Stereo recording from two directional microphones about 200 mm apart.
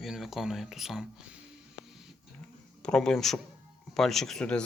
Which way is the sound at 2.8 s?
5° left (ahead or behind).